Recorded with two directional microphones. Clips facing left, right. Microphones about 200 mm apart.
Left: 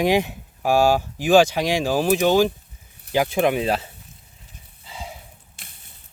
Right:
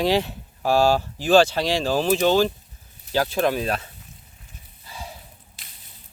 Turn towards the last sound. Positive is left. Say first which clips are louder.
# left 2 dB
turn(degrees=20)  # may be behind; listen again after turning